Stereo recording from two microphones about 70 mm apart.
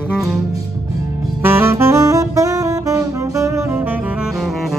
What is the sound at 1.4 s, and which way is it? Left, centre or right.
Saxophone, right.